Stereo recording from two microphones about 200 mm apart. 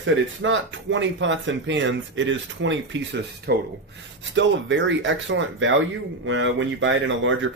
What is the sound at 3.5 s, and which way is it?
Speech, 55° right (ahead or behind).